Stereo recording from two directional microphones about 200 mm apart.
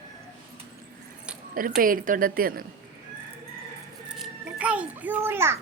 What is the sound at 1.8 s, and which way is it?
Speech, 45° right (ahead or behind).